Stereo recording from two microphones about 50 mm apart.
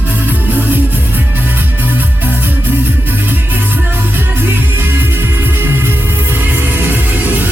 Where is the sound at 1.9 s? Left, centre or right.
Right.